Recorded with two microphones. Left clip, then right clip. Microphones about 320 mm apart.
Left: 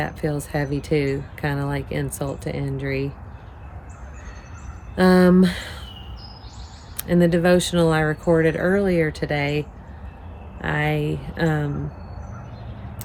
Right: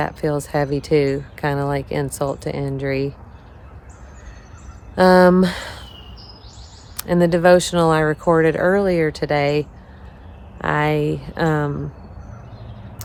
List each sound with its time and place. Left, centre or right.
0.0 s speech: centre
4.9 s speech: centre
6.9 s speech: centre